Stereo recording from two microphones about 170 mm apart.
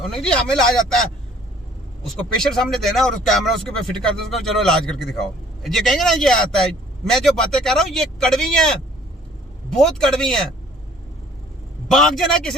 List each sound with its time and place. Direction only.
0.0 s a man's voice: 5° left (ahead or behind)
2.4 s a man's voice: centre (ahead or behind)
9.6 s a man's voice: 5° left (ahead or behind)
11.9 s a man's voice: centre (ahead or behind)